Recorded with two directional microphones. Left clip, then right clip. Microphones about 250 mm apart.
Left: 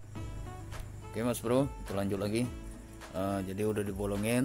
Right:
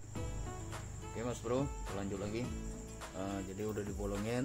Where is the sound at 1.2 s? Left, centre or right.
Left.